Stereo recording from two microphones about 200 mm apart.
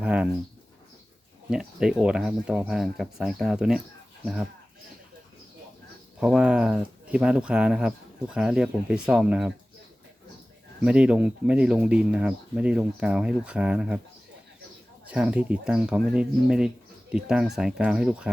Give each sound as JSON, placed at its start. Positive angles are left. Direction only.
{"t": 0.0, "sound": "speech", "side_deg": -5}
{"t": 1.5, "sound": "speech", "side_deg": -5}
{"t": 6.1, "sound": "speech", "side_deg": -5}
{"t": 10.8, "sound": "speech", "side_deg": -5}
{"t": 15.0, "sound": "speech", "side_deg": -5}